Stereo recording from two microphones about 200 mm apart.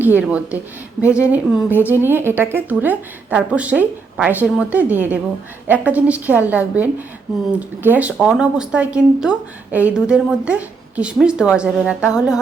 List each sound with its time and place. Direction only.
0.0 s a woman's voice: 10° right (ahead or behind)